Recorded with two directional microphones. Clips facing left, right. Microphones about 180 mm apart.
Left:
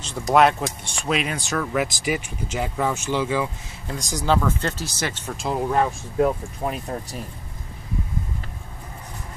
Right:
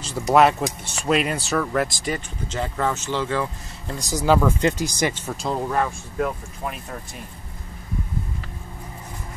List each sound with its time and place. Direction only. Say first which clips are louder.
0.0 s speech: right 1 dB; 5° right (ahead or behind)
3.9 s speech: right 3 dB; 5° right (ahead or behind)
5.7 s speech: left 2 dB; 20° left (ahead or behind)